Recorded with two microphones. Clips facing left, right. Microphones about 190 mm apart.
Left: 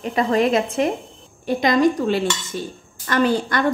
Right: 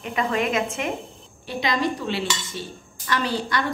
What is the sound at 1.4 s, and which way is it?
A woman's voice, 45° left (ahead or behind).